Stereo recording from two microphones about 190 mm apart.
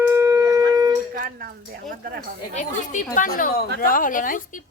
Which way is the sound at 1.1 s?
50° right (ahead or behind).